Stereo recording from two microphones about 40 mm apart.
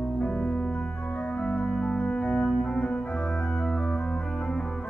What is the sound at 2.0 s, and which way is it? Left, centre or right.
Organ, left.